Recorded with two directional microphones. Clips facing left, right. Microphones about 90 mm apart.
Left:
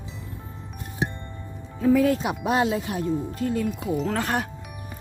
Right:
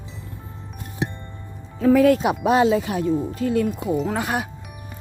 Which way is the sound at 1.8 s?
75° right (ahead or behind).